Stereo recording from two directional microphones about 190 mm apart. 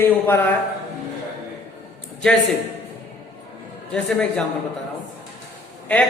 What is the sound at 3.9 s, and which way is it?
Speech, 5° left (ahead or behind).